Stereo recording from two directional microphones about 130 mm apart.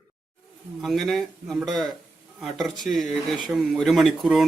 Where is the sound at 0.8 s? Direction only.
Centre (ahead or behind).